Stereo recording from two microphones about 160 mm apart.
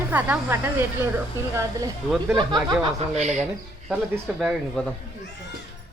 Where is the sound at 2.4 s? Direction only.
30° right (ahead or behind).